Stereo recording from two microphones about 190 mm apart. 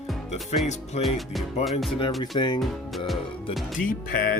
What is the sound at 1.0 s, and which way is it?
Speech, centre (ahead or behind).